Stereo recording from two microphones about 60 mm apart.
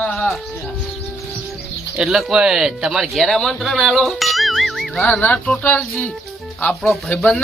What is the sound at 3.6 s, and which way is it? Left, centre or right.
Ding, centre.